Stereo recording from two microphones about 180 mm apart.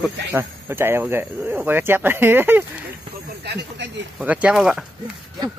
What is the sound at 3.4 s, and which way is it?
Snake, 70° right (ahead or behind).